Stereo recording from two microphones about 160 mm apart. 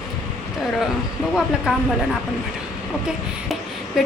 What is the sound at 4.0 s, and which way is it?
Speech, centre (ahead or behind).